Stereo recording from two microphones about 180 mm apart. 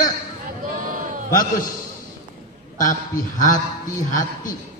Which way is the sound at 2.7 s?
45° left (ahead or behind).